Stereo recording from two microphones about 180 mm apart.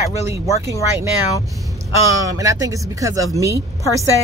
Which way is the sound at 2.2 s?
20° right (ahead or behind).